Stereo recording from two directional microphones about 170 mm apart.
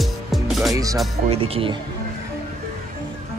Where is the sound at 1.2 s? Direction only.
35° right (ahead or behind).